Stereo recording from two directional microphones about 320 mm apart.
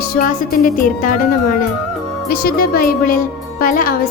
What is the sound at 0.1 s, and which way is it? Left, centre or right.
A woman's voice, left.